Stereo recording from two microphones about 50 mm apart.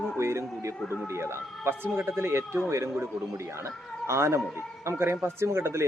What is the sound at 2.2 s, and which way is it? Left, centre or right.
Speech, right.